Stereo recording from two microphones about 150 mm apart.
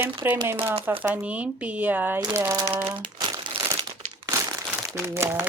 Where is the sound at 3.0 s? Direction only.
30° right (ahead or behind).